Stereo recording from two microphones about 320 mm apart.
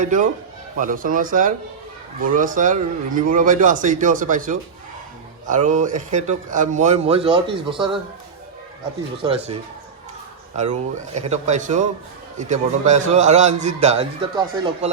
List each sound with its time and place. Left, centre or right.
0.0 s a man's voice: right
9.2 s speech: centre
10.6 s a man's voice: right